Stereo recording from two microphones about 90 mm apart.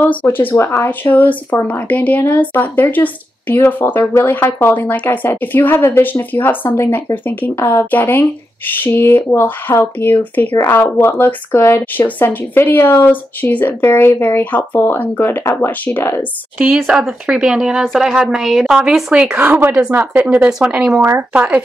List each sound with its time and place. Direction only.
0.0 s speech: 15° left (ahead or behind)
16.5 s a woman's voice: 5° right (ahead or behind)
19.3 s a woman's voice: 20° right (ahead or behind)